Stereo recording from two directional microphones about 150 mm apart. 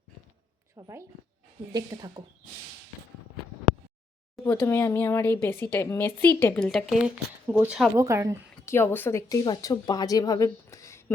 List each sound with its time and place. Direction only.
0.8 s speech: 20° right (ahead or behind)
4.4 s speech: 15° left (ahead or behind)
6.7 s speech: centre (ahead or behind)
7.9 s speech: 20° right (ahead or behind)
8.6 s a woman's voice: 15° left (ahead or behind)